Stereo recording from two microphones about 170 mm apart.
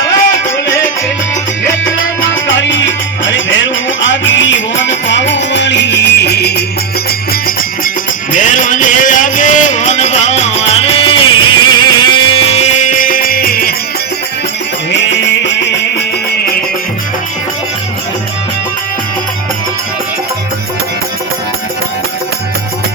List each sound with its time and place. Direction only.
2.5 s music: 90° left; by 6.7 s 75° left (ahead or behind)
8.3 s music: 50° left (ahead or behind)